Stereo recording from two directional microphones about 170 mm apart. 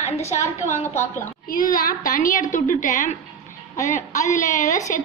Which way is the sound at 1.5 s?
55° left (ahead or behind).